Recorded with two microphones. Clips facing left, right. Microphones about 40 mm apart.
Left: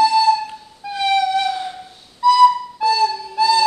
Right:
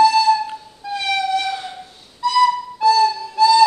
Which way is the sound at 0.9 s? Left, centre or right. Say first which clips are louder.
Left 3 dB; centre.